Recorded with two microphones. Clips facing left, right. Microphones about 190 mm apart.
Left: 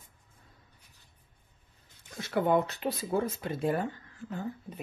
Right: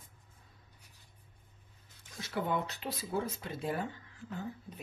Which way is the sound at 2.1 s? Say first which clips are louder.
Left 8 dB; 55° left (ahead or behind).